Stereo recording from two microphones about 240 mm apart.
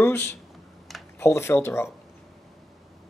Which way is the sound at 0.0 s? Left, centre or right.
Centre.